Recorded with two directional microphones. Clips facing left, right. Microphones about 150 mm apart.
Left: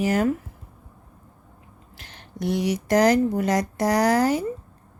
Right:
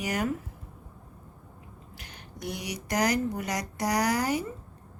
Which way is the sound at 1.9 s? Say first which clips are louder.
Left 5 dB; 15° right (ahead or behind).